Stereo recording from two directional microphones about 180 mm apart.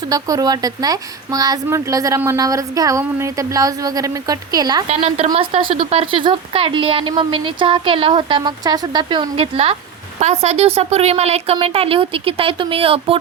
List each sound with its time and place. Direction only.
0.1 s a woman's voice: 20° right (ahead or behind)
4.9 s a woman's voice: 35° right (ahead or behind)